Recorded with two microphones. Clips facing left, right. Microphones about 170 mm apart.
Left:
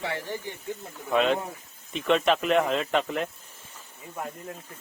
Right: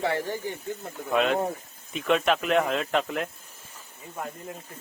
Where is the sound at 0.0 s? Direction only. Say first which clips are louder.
Right 5 dB; 45° right (ahead or behind).